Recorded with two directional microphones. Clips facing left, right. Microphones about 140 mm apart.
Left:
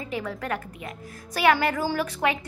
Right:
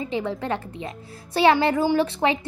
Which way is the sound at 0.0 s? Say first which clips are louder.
Right 5 dB; 25° right (ahead or behind).